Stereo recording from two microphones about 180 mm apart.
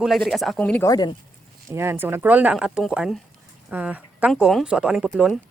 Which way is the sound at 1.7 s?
15° right (ahead or behind).